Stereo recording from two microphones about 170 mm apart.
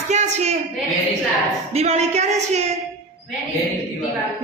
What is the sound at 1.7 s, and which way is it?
Speech, 40° right (ahead or behind).